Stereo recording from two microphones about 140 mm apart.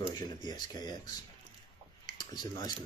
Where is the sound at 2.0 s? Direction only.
30° left (ahead or behind).